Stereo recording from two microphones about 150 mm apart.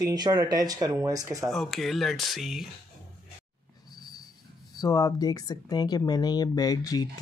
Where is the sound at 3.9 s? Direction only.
25° left (ahead or behind).